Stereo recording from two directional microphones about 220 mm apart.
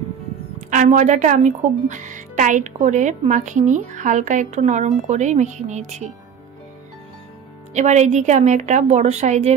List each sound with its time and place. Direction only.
0.7 s a woman's voice: 35° right (ahead or behind)
7.7 s a woman's voice: 30° right (ahead or behind)